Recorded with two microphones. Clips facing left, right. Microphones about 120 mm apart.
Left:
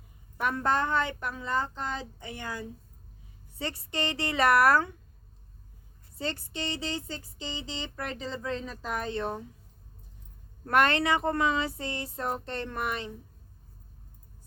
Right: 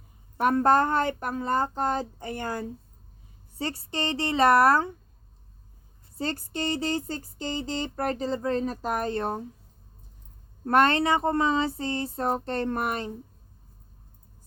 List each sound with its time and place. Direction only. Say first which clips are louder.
0.3 s speech: right 7 dB; 40° right (ahead or behind)
3.6 s a woman's voice: right 2 dB; 35° right (ahead or behind)
6.1 s speech: right 4 dB; 40° right (ahead or behind)
10.7 s speech: right 3 dB; 30° right (ahead or behind)